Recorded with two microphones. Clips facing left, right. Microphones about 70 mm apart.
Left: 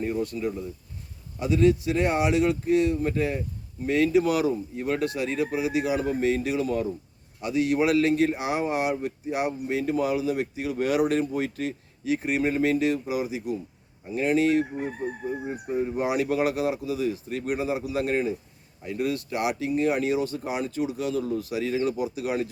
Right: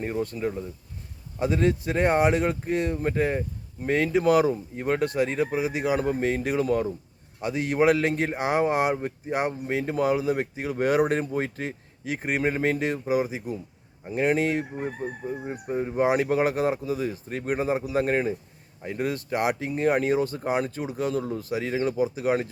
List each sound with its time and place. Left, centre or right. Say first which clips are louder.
0.0 s speech: even; right
15.4 s speech: left 1 dB; centre
16.0 s speech: right 4 dB; right